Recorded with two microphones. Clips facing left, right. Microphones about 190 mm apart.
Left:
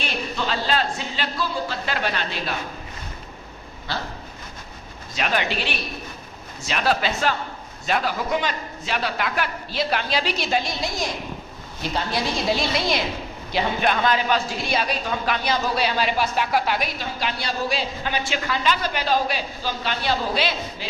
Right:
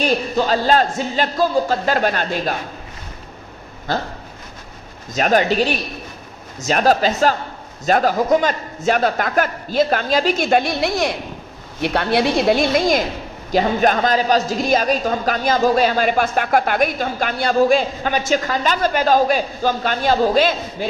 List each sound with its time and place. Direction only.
0.0 s a woman's voice: 40° right (ahead or behind)
3.9 s a woman's voice: 45° right (ahead or behind)
5.1 s a woman's voice: 45° right (ahead or behind)